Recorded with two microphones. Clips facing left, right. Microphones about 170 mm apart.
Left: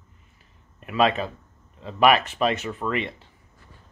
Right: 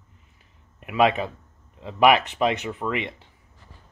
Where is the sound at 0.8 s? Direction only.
15° right (ahead or behind).